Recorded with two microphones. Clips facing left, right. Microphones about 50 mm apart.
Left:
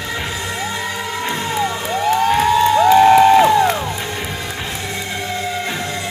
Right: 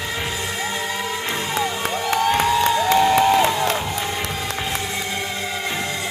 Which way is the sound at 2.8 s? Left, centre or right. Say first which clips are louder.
Left 10 dB; left.